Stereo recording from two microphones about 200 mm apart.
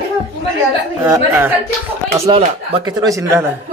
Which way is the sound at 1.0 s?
10° right (ahead or behind).